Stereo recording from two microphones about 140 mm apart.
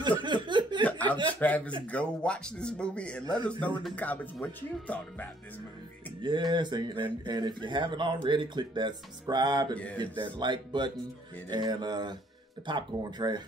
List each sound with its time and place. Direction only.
0.2 s a sound: 35° right (ahead or behind)
1.0 s chuckle: 35° right (ahead or behind)
1.4 s speech: 10° left (ahead or behind)
6.2 s speech: 35° right (ahead or behind)